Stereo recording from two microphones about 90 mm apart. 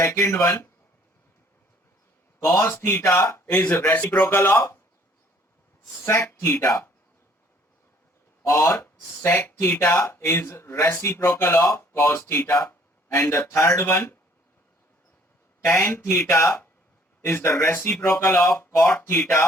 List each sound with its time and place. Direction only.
0.0 s speech: 30° left (ahead or behind)
2.4 s speech: 30° left (ahead or behind)
6.1 s speech: 30° left (ahead or behind)
8.4 s speech: 30° left (ahead or behind)
15.7 s speech: 25° left (ahead or behind)